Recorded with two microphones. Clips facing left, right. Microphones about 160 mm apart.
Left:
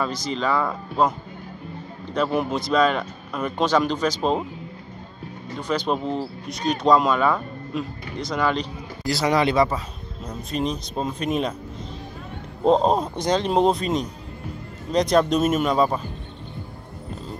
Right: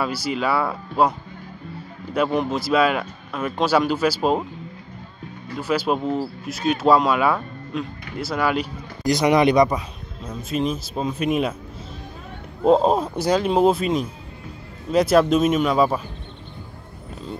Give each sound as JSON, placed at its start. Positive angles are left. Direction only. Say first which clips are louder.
{"t": 0.0, "sound": "speech", "louder": "right 2 dB", "side_deg": -10}
{"t": 2.1, "sound": "speech", "louder": "right 1 dB", "side_deg": 0}
{"t": 5.6, "sound": "speech", "louder": "right 2 dB", "side_deg": -5}
{"t": 9.0, "sound": "speech", "louder": "right 4 dB", "side_deg": -20}
{"t": 10.2, "sound": "speech", "louder": "right 2 dB", "side_deg": -5}
{"t": 12.6, "sound": "speech", "louder": "right 2 dB", "side_deg": -5}